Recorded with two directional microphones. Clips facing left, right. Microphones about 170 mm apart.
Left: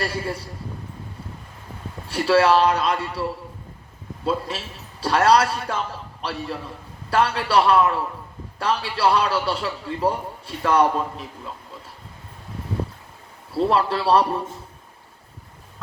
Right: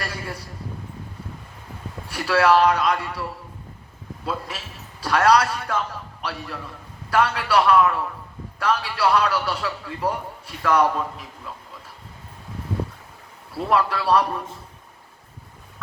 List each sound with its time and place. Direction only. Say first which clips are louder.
0.0 s a man's voice: left 5 dB; 30° left (ahead or behind)
2.0 s a man's voice: left 2 dB; 30° left (ahead or behind)
4.3 s a man's voice: left 5 dB; 30° left (ahead or behind)
7.1 s a man's voice: even; 30° left (ahead or behind)
13.5 s a man's voice: left 2 dB; 30° left (ahead or behind)